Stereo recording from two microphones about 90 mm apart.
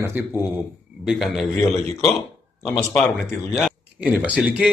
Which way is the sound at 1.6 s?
35° left (ahead or behind).